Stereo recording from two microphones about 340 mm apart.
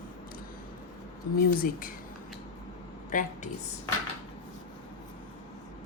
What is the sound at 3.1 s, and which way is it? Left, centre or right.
Speech, left.